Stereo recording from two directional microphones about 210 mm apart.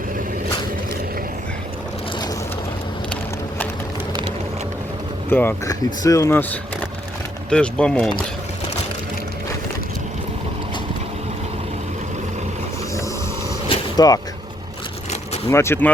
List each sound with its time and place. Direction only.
5.3 s speech: 10° left (ahead or behind)
13.7 s mechanisms: 20° left (ahead or behind)
15.4 s speech: 10° left (ahead or behind)